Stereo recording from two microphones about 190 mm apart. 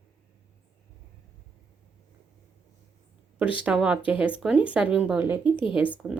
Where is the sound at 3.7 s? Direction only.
5° right (ahead or behind).